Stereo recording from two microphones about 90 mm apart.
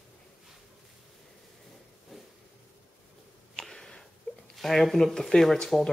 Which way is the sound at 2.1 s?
Centre (ahead or behind).